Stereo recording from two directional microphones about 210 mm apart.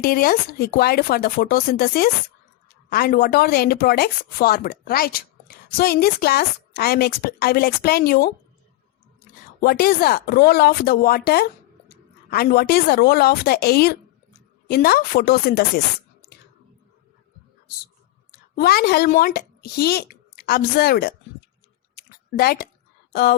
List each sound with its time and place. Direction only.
0.0 s speech: 45° left (ahead or behind)
9.6 s speech: 45° left (ahead or behind)
18.3 s a woman's voice: 45° left (ahead or behind)
21.9 s a sound: 45° left (ahead or behind)